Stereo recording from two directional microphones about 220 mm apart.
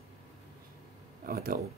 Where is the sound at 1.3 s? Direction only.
40° right (ahead or behind).